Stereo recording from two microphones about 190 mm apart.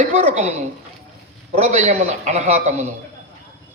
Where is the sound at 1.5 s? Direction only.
35° right (ahead or behind).